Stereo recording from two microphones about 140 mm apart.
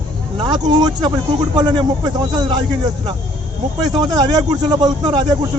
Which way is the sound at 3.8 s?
30° right (ahead or behind).